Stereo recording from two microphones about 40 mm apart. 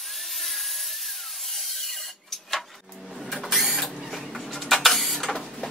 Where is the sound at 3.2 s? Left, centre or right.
Centre.